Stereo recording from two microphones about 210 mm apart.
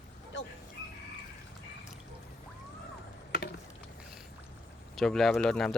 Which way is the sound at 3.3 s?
50° left (ahead or behind).